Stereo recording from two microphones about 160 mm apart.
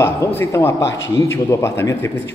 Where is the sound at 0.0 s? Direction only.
15° left (ahead or behind).